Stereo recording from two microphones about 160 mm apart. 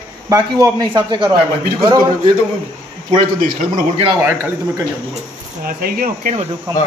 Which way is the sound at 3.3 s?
60° right (ahead or behind).